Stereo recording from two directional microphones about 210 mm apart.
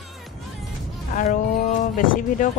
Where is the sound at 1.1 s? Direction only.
40° left (ahead or behind).